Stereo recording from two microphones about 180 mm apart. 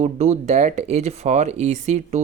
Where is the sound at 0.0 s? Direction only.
40° right (ahead or behind).